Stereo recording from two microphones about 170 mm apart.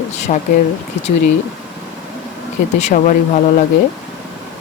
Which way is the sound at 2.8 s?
45° left (ahead or behind).